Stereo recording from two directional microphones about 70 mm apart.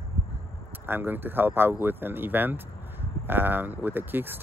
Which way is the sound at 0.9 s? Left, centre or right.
Right.